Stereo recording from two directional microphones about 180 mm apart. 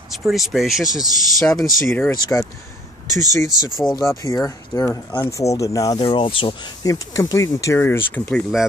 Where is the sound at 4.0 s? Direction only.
20° left (ahead or behind).